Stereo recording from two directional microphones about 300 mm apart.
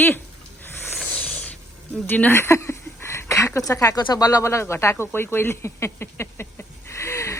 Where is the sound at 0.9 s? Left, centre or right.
Centre.